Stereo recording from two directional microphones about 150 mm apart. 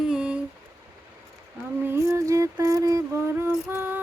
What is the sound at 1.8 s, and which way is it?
Music, 20° right (ahead or behind).